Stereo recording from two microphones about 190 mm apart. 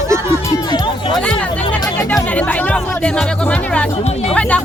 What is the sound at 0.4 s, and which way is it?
Music, 20° left (ahead or behind).